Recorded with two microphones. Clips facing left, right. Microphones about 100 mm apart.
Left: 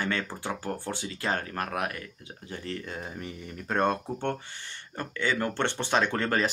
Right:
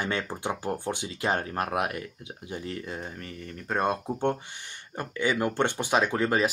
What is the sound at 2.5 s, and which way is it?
Speech, 5° right (ahead or behind).